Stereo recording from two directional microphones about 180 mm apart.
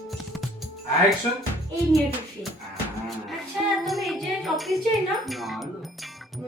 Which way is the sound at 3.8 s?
Centre (ahead or behind).